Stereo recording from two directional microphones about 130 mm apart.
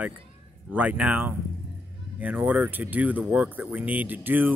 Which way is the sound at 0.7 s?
10° right (ahead or behind).